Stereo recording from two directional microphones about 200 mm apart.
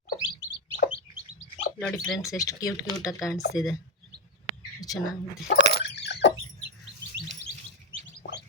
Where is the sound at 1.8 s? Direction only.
5° left (ahead or behind).